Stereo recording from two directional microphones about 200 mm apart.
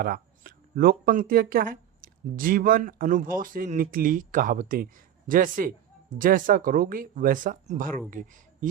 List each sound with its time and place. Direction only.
0.0 s speech: 45° right (ahead or behind)